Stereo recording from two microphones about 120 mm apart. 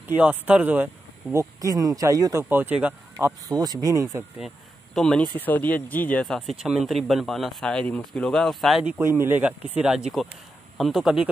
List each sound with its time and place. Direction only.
0.1 s speech: 10° right (ahead or behind)
1.3 s speech: 25° right (ahead or behind)
2.5 s speech: 15° right (ahead or behind)
3.5 s speech: 35° right (ahead or behind)
4.9 s speech: 5° left (ahead or behind)
6.2 s speech: centre (ahead or behind)
8.8 s speech: 15° right (ahead or behind)